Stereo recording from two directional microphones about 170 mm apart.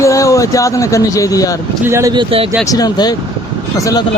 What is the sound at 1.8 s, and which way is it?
Speech, 15° right (ahead or behind).